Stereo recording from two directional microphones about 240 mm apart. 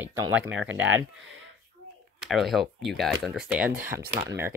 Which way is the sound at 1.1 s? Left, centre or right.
Right.